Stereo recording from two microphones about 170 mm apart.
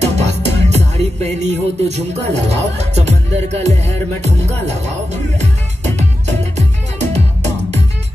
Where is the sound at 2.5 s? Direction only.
40° right (ahead or behind).